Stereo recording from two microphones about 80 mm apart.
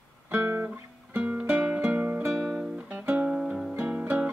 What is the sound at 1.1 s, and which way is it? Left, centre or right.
Music, centre.